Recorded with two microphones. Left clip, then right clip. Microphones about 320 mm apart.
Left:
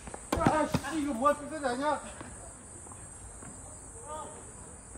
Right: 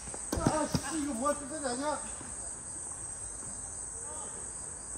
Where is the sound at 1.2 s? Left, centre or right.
Left.